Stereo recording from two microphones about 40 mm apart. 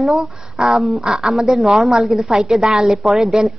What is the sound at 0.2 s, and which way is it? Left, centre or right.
A woman's voice, centre.